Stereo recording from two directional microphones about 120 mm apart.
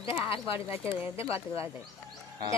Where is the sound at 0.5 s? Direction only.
20° right (ahead or behind).